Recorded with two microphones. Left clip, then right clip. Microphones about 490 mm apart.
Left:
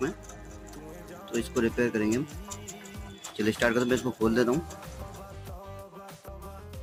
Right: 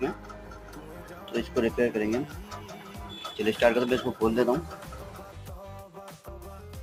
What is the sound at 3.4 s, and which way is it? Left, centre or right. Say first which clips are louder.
Speech: right 3 dB; left.